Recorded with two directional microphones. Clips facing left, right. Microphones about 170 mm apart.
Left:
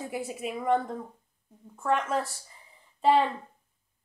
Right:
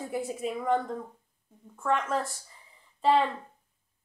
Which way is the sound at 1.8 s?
5° left (ahead or behind).